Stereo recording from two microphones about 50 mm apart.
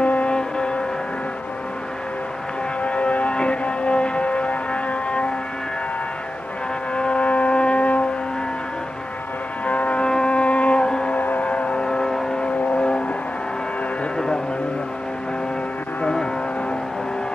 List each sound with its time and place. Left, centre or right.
0.0 s music: left
2.8 s music: left
7.0 s a sound: left
9.7 s music: left
10.0 s music: centre
11.1 s vehicle: left; by 12.4 s centre
12.4 s vehicle: left
14.1 s music: centre
16.0 s music: centre